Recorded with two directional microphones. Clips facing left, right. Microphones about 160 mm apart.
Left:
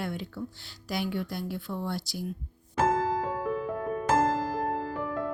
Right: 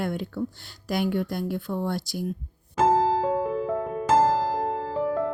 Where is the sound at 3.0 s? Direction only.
25° right (ahead or behind).